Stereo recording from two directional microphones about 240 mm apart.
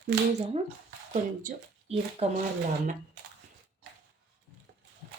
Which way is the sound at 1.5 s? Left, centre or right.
Right.